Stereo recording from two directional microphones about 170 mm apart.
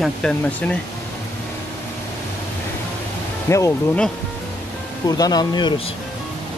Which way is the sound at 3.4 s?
15° left (ahead or behind).